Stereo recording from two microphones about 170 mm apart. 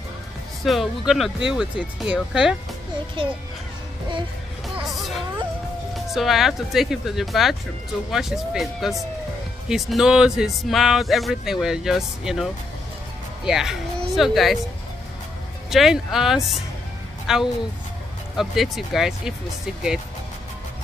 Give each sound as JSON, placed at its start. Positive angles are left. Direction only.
{"t": 0.7, "sound": "speech", "side_deg": 0}
{"t": 3.2, "sound": "a child's voice", "side_deg": -30}
{"t": 6.1, "sound": "speech", "side_deg": 0}
{"t": 13.5, "sound": "speech", "side_deg": -5}
{"t": 15.7, "sound": "speech", "side_deg": 0}